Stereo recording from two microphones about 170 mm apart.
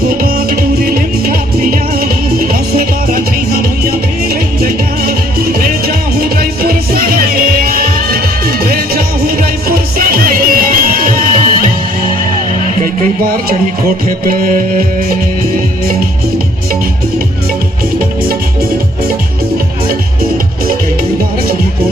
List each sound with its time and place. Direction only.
0.2 s music: 55° right (ahead or behind)
4.6 s music: 60° right (ahead or behind)
12.8 s music: 55° right (ahead or behind)